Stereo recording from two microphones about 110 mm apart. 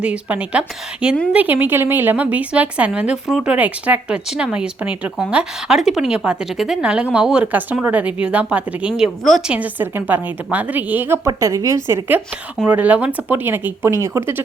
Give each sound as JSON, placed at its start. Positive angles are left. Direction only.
{"t": 0.0, "sound": "a woman's voice", "side_deg": -10}
{"t": 8.9, "sound": "speech", "side_deg": 0}
{"t": 9.5, "sound": "a woman's voice", "side_deg": -15}
{"t": 11.3, "sound": "a woman's voice", "side_deg": -30}